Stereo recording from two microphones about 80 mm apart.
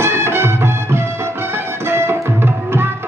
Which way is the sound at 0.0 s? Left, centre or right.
Right.